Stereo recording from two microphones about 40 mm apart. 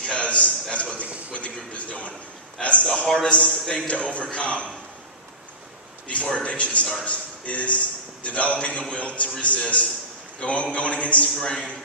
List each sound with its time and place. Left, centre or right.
0.0 s a sound: left
2.6 s a man's voice: left
6.2 s a man's voice: left
11.3 s a man's voice: centre